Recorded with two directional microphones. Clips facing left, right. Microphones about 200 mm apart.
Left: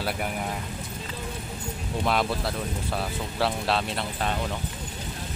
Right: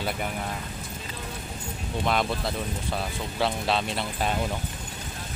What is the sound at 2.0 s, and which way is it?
Speech, centre (ahead or behind).